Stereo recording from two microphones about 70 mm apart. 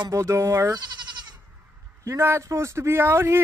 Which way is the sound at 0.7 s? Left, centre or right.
Right.